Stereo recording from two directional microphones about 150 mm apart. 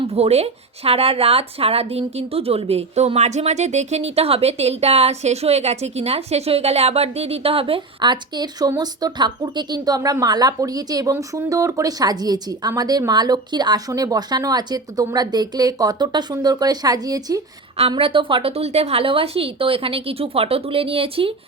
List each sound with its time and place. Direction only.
0.1 s a woman's voice: 45° right (ahead or behind); by 17.4 s 25° right (ahead or behind)
17.7 s a woman's voice: 40° right (ahead or behind)